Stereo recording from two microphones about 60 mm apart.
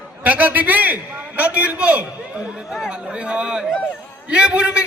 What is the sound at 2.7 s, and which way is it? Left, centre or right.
A man's voice, centre.